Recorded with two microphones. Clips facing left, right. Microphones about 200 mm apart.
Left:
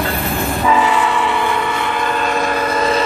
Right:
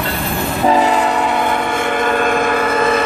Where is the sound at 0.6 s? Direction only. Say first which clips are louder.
Right 3 dB; 40° right (ahead or behind).